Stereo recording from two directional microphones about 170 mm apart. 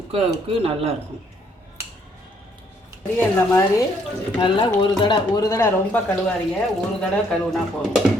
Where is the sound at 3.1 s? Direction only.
15° left (ahead or behind).